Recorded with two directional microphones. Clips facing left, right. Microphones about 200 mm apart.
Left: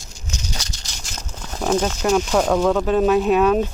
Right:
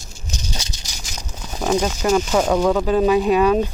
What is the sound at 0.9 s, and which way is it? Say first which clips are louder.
Speech: even; 5° right (ahead or behind).